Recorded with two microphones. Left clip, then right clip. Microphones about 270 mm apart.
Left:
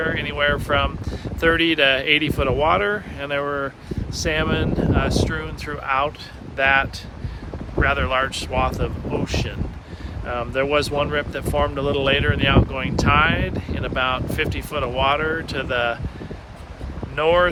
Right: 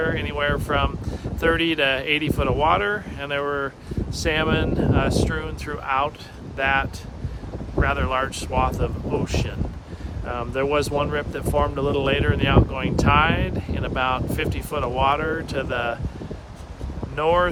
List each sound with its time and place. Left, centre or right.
0.0 s speech: centre
4.1 s speech: centre
17.2 s speech: centre